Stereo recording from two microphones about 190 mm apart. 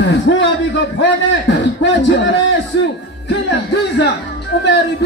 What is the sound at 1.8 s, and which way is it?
Speech, 65° left (ahead or behind).